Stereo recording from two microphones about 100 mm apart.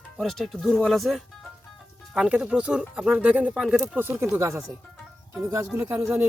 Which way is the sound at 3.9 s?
25° right (ahead or behind).